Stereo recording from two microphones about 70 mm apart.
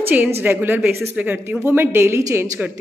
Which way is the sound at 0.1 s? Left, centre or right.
Right.